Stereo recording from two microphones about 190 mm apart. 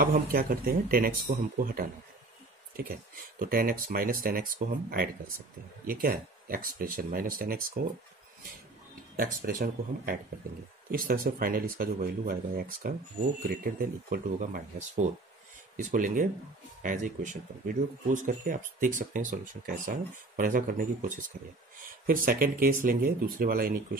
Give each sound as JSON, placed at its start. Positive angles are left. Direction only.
{"t": 0.0, "sound": "speech", "side_deg": -50}
{"t": 2.8, "sound": "speech", "side_deg": -50}
{"t": 9.1, "sound": "speech", "side_deg": -50}